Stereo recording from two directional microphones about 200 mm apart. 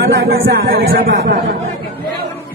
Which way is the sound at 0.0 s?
50° right (ahead or behind).